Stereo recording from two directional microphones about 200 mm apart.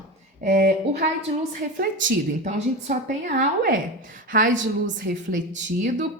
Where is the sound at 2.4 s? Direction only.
35° right (ahead or behind).